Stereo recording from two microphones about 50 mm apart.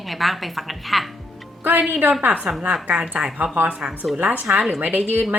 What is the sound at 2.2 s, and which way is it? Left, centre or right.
A woman's voice, right.